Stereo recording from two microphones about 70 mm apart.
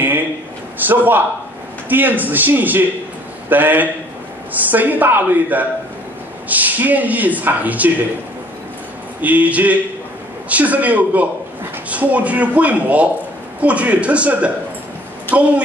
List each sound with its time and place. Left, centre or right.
0.7 s speech: right
9.2 s speech: right
15.3 s speech: left